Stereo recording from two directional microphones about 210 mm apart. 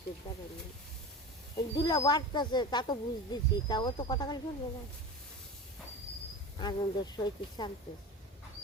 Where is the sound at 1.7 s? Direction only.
20° left (ahead or behind).